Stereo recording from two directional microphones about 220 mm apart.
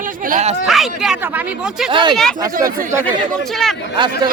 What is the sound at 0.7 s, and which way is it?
Speech, centre (ahead or behind).